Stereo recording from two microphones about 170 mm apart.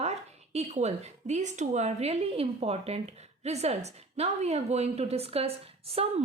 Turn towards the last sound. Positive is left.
turn(degrees=-35)  # may be behind; listen again after turning